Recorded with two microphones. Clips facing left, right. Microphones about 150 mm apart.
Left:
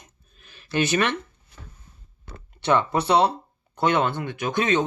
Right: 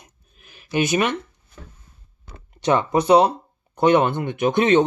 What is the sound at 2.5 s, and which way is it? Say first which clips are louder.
Speech: right 3 dB; 15° right (ahead or behind).